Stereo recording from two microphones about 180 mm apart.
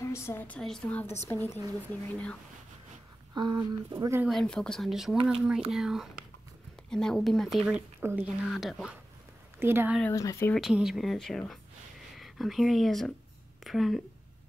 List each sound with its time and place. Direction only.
0.0 s a woman's voice: 15° left (ahead or behind)
3.3 s speech: 25° right (ahead or behind)
4.2 s speech: centre (ahead or behind)
8.0 s speech: 15° right (ahead or behind)
8.5 s speech: centre (ahead or behind)
9.6 s speech: 10° right (ahead or behind)
10.1 s a woman's voice: 15° left (ahead or behind)
10.5 s speech: centre (ahead or behind)